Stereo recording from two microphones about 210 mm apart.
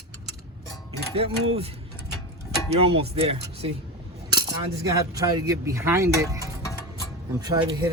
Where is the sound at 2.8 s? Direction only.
25° right (ahead or behind).